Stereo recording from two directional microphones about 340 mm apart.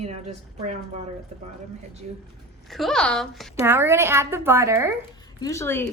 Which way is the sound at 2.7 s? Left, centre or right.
Centre.